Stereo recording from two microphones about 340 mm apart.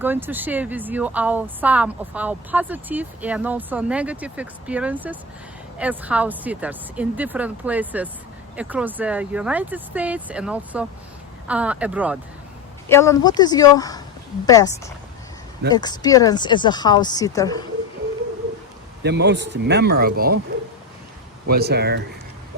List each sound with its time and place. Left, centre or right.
0.0 s speech: centre
12.9 s speech: centre
19.0 s speech: right
21.4 s speech: right